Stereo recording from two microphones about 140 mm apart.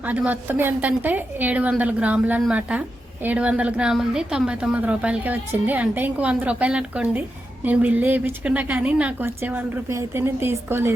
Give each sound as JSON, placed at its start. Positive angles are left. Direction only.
{"t": 0.0, "sound": "a woman's voice", "side_deg": -10}